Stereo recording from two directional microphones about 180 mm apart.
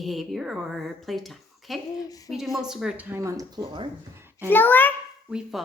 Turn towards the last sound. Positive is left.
turn(degrees=-5)  # may be behind; listen again after turning